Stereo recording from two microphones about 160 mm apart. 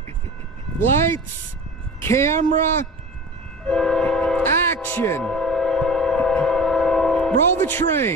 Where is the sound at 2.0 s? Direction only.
15° left (ahead or behind).